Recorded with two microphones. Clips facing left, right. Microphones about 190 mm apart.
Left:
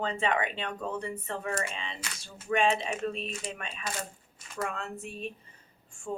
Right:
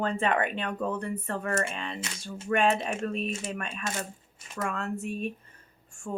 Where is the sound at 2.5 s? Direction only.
50° right (ahead or behind).